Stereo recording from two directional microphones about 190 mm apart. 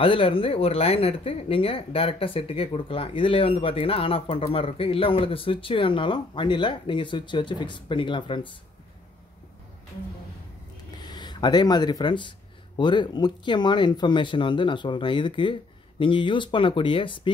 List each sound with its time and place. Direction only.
0.0 s speech: 30° left (ahead or behind)
11.0 s speech: 20° left (ahead or behind)